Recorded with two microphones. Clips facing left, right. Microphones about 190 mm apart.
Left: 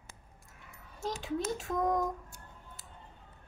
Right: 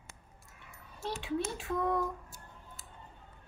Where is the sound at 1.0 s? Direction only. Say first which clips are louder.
Left 1 dB; 40° left (ahead or behind).